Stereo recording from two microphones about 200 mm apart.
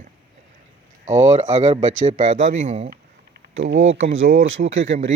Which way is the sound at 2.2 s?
40° right (ahead or behind).